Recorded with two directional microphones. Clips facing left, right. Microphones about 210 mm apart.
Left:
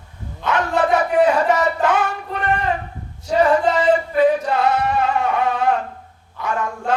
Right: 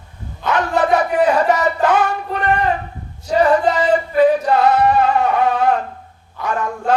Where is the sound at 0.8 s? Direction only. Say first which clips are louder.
Right 1 dB; 35° right (ahead or behind).